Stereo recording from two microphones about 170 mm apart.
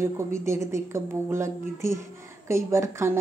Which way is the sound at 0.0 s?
15° right (ahead or behind).